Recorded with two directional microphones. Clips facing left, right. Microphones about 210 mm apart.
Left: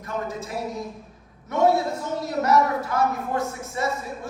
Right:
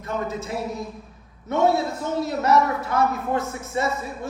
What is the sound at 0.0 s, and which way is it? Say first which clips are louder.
Speech: right 2 dB; 25° right (ahead or behind).